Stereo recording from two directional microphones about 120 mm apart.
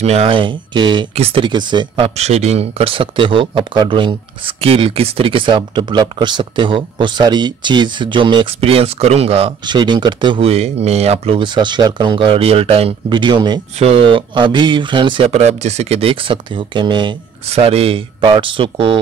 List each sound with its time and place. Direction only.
0.0 s speech: 60° right (ahead or behind); by 1.0 s 40° right (ahead or behind)
1.1 s speech: 60° right (ahead or behind)
1.4 s speech: 40° right (ahead or behind)
2.1 s speech: 65° right (ahead or behind)
9.7 s speech: 40° right (ahead or behind)
10.5 s speech: 60° right (ahead or behind)
13.1 s speech: 40° right (ahead or behind)
13.7 s speech: 55° right (ahead or behind)
15.2 s speech: 65° right (ahead or behind); by 17.2 s 40° right (ahead or behind)
17.5 s speech: 55° right (ahead or behind)